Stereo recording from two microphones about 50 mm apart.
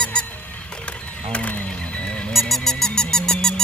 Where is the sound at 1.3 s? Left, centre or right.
Left.